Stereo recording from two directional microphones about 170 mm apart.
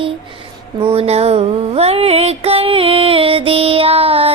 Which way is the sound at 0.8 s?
35° right (ahead or behind).